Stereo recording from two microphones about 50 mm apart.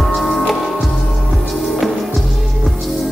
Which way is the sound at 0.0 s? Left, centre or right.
Centre.